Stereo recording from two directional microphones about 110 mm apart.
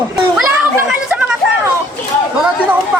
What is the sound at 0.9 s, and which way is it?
Chatter, 10° right (ahead or behind).